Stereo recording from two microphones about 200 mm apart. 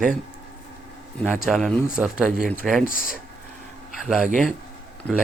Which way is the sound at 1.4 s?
Centre (ahead or behind).